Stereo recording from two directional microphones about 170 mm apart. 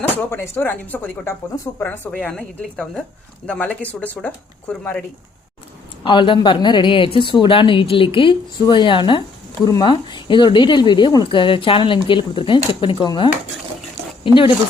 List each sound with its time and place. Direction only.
0.2 s speech: 15° left (ahead or behind)
6.0 s speech: 30° left (ahead or behind)